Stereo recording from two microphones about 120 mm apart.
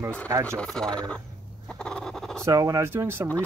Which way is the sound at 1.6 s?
5° left (ahead or behind).